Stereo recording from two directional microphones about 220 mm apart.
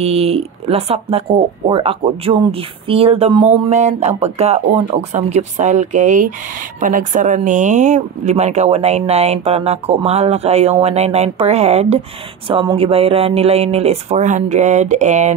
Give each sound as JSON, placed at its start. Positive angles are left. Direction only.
{"t": 0.0, "sound": "speech", "side_deg": -25}